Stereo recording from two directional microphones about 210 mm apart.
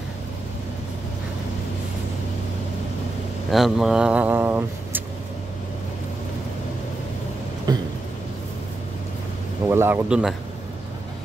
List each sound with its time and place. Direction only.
3.5 s speech: centre (ahead or behind)
7.7 s a sound: 20° right (ahead or behind)
9.7 s a man's voice: 10° right (ahead or behind)